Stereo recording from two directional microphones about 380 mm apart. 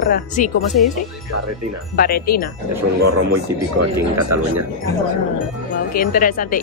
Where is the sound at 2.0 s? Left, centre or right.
Left.